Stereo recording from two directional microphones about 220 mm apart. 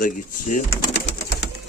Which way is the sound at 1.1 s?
50° left (ahead or behind).